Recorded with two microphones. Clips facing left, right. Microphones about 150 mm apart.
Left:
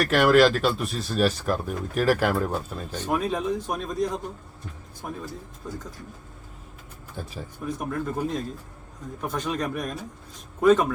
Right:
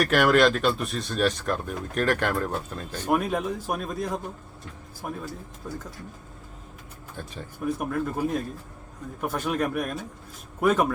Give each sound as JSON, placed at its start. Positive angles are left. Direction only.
{"t": 0.1, "sound": "speech", "side_deg": 0}
{"t": 3.0, "sound": "speech", "side_deg": -10}
{"t": 7.2, "sound": "speech", "side_deg": 5}
{"t": 7.8, "sound": "speech", "side_deg": -5}